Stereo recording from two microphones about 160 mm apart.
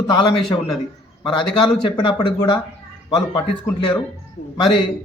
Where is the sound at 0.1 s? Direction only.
25° left (ahead or behind).